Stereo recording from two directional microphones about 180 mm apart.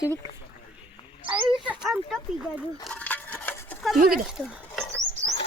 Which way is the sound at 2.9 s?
10° left (ahead or behind).